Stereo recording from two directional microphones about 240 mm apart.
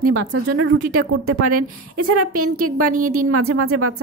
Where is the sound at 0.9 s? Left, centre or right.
Right.